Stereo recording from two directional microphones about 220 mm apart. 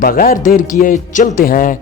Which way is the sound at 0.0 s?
40° left (ahead or behind).